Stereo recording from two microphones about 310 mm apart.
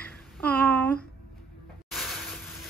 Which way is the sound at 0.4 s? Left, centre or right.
Centre.